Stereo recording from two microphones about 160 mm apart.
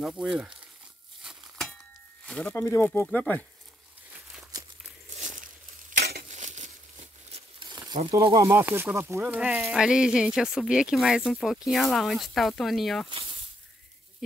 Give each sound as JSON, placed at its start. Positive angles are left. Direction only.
{"t": 0.0, "sound": "speech", "side_deg": -5}
{"t": 1.2, "sound": "a sound", "side_deg": 0}
{"t": 2.2, "sound": "speech", "side_deg": 5}
{"t": 5.1, "sound": "a sound", "side_deg": -50}
{"t": 5.9, "sound": "a sound", "side_deg": -90}
{"t": 6.2, "sound": "crumpling", "side_deg": -50}
{"t": 7.6, "sound": "crumpling", "side_deg": -25}
{"t": 8.1, "sound": "speech", "side_deg": -30}
{"t": 8.5, "sound": "speech", "side_deg": -15}
{"t": 13.1, "sound": "snake", "side_deg": -35}